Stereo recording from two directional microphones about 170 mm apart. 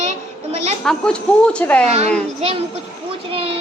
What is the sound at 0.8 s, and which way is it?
Speech, 5° left (ahead or behind).